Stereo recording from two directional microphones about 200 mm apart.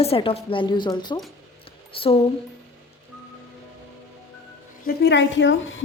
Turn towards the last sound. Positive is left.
turn(degrees=70)  # may be behind; listen again after turning